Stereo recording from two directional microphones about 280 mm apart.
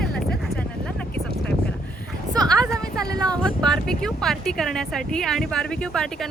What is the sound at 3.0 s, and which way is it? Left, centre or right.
Speech, centre.